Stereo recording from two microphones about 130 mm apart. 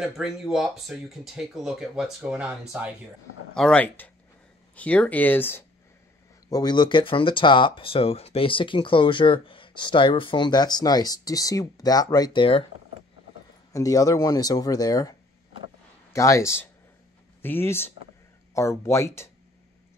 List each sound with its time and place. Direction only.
0.0 s speech: 5° right (ahead or behind)
3.5 s speech: 5° left (ahead or behind)
6.5 s speech: 35° left (ahead or behind)
13.7 s speech: 25° left (ahead or behind)